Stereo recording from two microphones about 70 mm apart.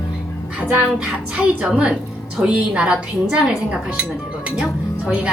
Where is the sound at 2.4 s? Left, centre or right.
Centre.